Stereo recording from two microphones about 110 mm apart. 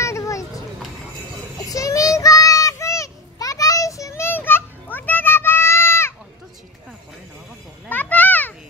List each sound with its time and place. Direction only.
0.0 s a sound: 30° left (ahead or behind)
1.7 s child singing: 30° left (ahead or behind)
7.9 s children playing: 15° left (ahead or behind)